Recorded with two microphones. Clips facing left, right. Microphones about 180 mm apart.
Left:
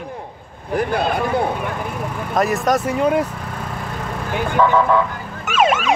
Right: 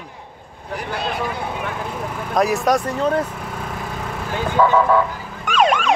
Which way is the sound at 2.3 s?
Centre (ahead or behind).